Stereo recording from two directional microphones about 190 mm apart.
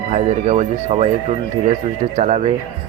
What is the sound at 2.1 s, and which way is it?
Speech, 40° right (ahead or behind).